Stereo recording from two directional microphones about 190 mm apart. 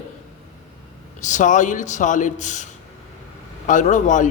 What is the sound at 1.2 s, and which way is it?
A man's voice, 40° left (ahead or behind).